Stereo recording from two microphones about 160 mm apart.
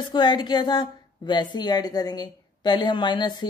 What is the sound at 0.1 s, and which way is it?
A woman's voice, 30° left (ahead or behind).